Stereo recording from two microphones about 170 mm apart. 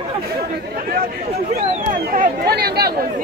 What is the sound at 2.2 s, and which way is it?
Speech, 65° right (ahead or behind).